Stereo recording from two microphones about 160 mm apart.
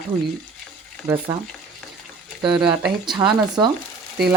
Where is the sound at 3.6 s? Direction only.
25° right (ahead or behind).